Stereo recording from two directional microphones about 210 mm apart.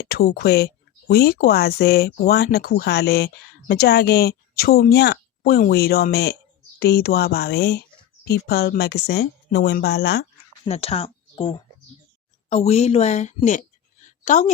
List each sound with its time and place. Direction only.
0.0 s speech: 45° left (ahead or behind)
10.7 s a woman's voice: 30° left (ahead or behind)